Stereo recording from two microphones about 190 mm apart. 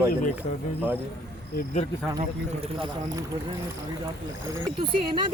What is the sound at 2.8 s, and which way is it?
Speech, 20° right (ahead or behind).